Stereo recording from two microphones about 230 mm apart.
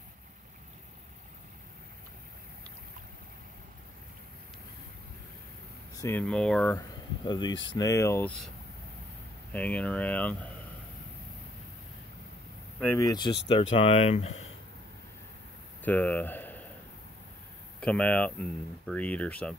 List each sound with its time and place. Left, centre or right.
5.9 s speech: centre
9.5 s speech: centre
12.8 s speech: centre; by 14.5 s left
15.8 s a sound: centre
17.7 s speech: centre